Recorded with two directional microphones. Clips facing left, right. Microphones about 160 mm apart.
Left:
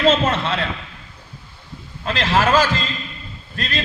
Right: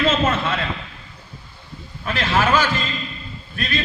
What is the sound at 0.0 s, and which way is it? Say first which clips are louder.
Speech: left 2 dB; 30° left (ahead or behind).